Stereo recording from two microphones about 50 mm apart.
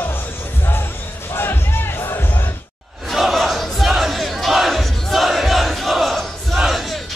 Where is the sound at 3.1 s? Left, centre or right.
Centre.